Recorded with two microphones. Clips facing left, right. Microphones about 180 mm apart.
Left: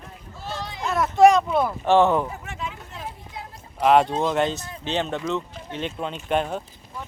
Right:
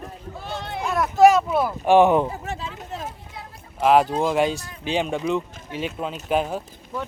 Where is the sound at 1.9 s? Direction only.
15° right (ahead or behind).